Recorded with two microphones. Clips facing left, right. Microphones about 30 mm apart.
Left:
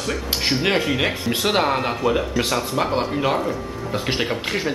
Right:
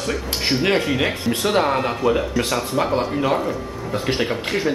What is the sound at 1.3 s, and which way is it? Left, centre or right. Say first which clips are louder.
Speech: right 1 dB; centre.